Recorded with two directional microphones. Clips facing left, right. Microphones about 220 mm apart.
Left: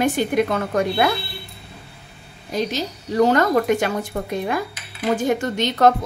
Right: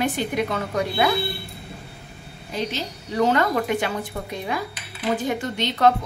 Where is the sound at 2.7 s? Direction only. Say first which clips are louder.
Left 6 dB; 40° left (ahead or behind).